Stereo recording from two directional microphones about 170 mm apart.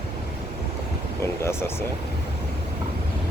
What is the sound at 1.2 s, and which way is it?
Speech, 15° left (ahead or behind).